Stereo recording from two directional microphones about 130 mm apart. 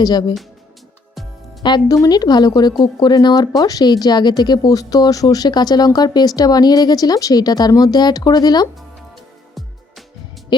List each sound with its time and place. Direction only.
0.0 s speech: 30° left (ahead or behind)
1.6 s speech: 30° left (ahead or behind)
10.5 s music: 35° left (ahead or behind)